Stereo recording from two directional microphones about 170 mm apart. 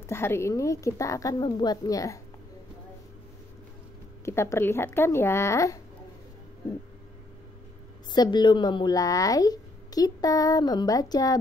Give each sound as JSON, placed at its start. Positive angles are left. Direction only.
{"t": 0.0, "sound": "speech", "side_deg": 15}
{"t": 4.2, "sound": "speech", "side_deg": 15}
{"t": 8.1, "sound": "speech", "side_deg": 25}